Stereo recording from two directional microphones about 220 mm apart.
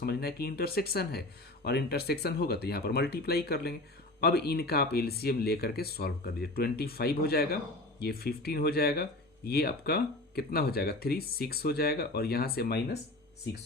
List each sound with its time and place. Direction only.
0.0 s speech: 45° left (ahead or behind)